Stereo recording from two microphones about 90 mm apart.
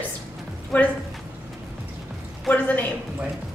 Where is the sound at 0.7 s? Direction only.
15° left (ahead or behind).